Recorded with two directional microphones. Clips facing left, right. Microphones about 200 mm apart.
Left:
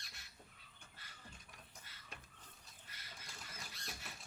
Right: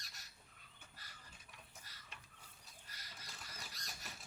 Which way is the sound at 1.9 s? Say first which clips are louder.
Even; 40° right (ahead or behind).